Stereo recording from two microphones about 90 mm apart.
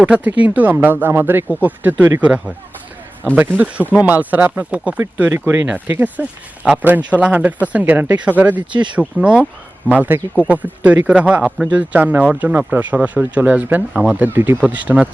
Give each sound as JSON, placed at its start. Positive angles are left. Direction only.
{"t": 0.0, "sound": "speech", "side_deg": -15}
{"t": 3.4, "sound": "speech", "side_deg": -20}